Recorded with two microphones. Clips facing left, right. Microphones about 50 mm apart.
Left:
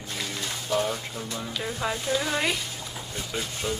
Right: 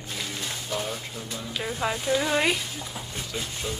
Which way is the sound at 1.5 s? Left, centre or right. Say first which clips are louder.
Right 2 dB; centre.